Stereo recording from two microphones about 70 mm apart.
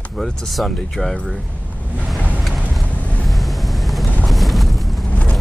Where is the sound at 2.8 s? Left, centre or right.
Left.